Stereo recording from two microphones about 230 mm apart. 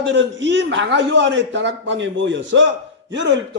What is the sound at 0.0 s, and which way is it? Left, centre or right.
A man's voice, right.